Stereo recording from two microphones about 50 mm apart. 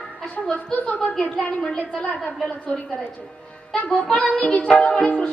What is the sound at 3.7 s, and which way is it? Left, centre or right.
A woman's voice, left.